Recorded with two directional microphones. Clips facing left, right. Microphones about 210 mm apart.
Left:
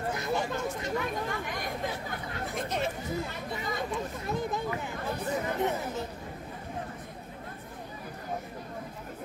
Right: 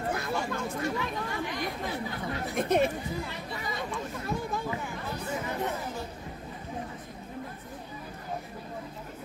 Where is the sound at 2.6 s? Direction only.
55° right (ahead or behind).